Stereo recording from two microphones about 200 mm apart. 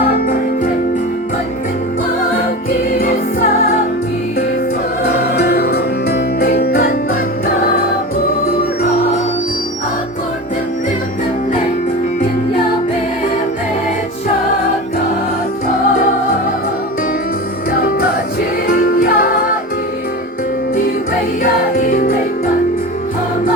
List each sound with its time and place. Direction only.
2.9 s music: 45° left (ahead or behind)
5.0 s music: 50° left (ahead or behind)
17.7 s music: 50° left (ahead or behind)
21.8 s music: 45° left (ahead or behind)